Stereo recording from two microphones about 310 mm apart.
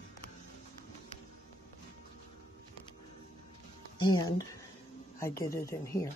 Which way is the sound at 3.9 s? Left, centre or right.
Centre.